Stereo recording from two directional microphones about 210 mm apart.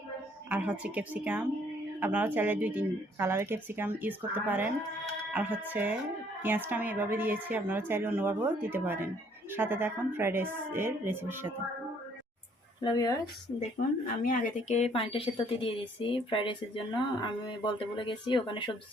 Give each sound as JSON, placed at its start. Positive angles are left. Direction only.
{"t": 0.5, "sound": "speech", "side_deg": -5}
{"t": 12.8, "sound": "speech", "side_deg": 20}
{"t": 14.2, "sound": "speech", "side_deg": 35}